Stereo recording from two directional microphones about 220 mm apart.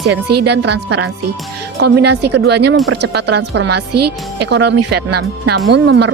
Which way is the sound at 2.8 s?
80° right.